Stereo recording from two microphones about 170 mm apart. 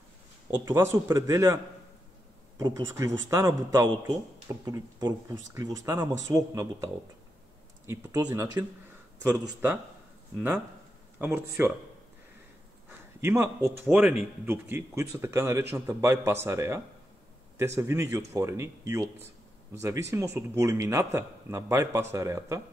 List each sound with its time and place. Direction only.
0.7 s a man's voice: 15° right (ahead or behind)
2.6 s a man's voice: 20° right (ahead or behind)
11.1 s a man's voice: 15° right (ahead or behind)
13.2 s a man's voice: 15° right (ahead or behind)